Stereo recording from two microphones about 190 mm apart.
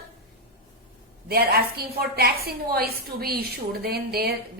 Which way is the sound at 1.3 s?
55° right (ahead or behind).